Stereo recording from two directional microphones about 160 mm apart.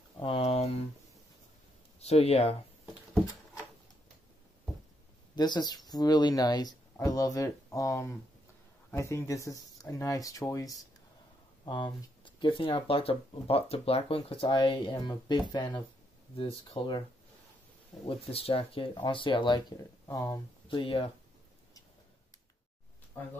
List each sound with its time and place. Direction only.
0.2 s a sound: 35° left (ahead or behind)
2.0 s speech: 40° left (ahead or behind)
5.3 s speech: 25° left (ahead or behind)
18.0 s speech: 35° left (ahead or behind)
20.1 s speech: 20° left (ahead or behind)
20.6 s speech: 30° left (ahead or behind)